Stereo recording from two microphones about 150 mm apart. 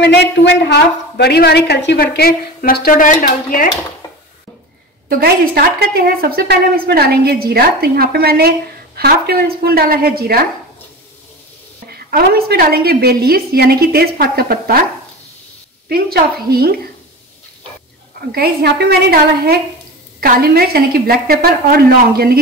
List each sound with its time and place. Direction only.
0.7 s a woman's voice: 90° left; by 3.6 s 65° left (ahead or behind)
5.1 s a woman's voice: 85° right
12.1 s a woman's voice: 90° right
15.9 s a woman's voice: 90° right
18.3 s a woman's voice: 90° right